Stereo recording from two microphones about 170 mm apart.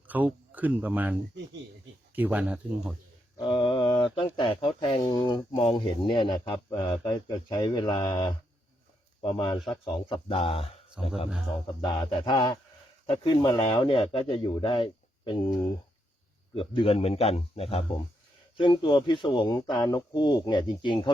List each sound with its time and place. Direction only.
0.1 s speech: 10° right (ahead or behind)
3.3 s a man's voice: 30° left (ahead or behind)
11.0 s speech: 5° right (ahead or behind)
11.9 s speech: 25° left (ahead or behind)
16.6 s a man's voice: 35° left (ahead or behind)